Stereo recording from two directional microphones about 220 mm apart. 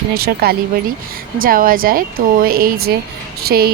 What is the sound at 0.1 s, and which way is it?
Speech, 45° right (ahead or behind).